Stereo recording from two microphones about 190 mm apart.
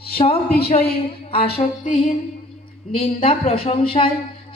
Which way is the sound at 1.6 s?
45° left (ahead or behind).